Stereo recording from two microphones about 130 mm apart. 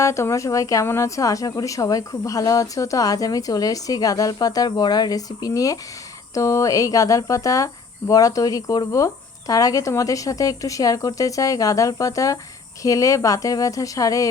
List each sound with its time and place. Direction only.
0.0 s speech: 20° left (ahead or behind)